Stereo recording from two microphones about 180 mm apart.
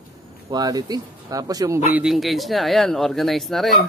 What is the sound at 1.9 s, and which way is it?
Speech, 5° right (ahead or behind).